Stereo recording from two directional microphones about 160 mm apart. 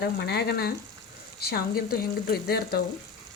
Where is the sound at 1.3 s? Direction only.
75° left (ahead or behind).